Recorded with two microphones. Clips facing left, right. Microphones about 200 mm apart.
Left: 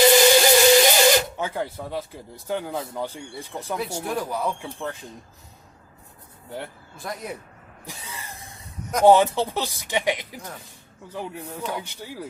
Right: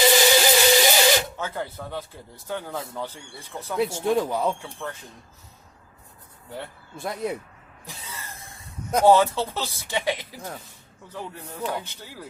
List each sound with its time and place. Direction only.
0.0 s a sound: centre (ahead or behind)
1.4 s speech: 15° left (ahead or behind)
3.8 s speech: 25° right (ahead or behind)
6.9 s speech: 25° right (ahead or behind)
7.9 s a sound: 15° left (ahead or behind)
9.0 s speech: 15° left (ahead or behind)